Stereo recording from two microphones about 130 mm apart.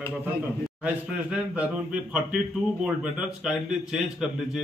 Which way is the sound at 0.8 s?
10° right (ahead or behind).